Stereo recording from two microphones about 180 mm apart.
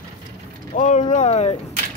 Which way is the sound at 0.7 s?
45° left (ahead or behind).